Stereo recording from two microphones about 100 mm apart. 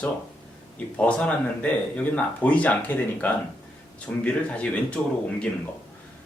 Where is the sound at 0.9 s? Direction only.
15° left (ahead or behind).